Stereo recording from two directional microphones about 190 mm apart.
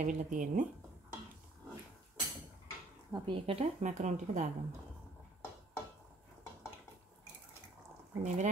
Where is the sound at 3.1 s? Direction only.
20° right (ahead or behind); by 4.4 s 40° right (ahead or behind).